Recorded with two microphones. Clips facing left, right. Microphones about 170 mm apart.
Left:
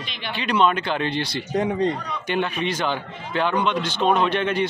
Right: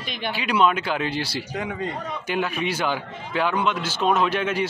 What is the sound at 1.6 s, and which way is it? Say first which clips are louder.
Speech: left 8 dB; 40° left (ahead or behind).